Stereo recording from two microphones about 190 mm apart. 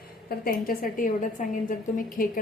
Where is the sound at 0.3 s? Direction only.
50° left (ahead or behind).